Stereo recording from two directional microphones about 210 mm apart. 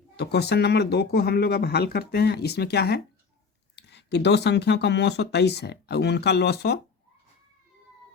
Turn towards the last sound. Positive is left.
turn(degrees=50)  # may be behind; listen again after turning